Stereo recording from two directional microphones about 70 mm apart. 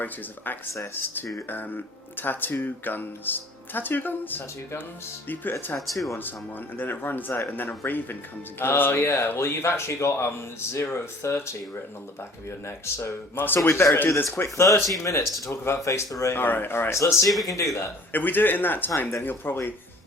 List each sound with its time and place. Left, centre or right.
0.9 s speech: left
5.8 s speech: centre
6.7 s speech: left
12.6 s speech: left
13.6 s speech: left
16.4 s speech: left
16.9 s speech: left
18.1 s speech: left